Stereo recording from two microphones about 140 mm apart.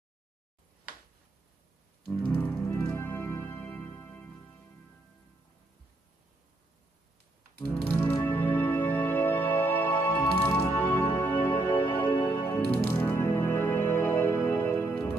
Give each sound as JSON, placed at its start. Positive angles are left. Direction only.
{"t": 2.2, "sound": "music", "side_deg": 10}
{"t": 7.9, "sound": "music", "side_deg": 15}